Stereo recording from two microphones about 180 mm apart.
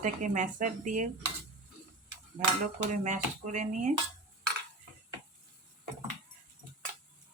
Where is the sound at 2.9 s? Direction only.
40° right (ahead or behind).